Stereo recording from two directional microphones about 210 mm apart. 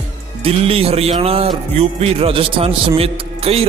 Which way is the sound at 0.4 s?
30° right (ahead or behind).